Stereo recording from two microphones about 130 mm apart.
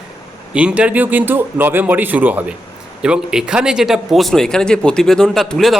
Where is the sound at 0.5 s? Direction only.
10° right (ahead or behind).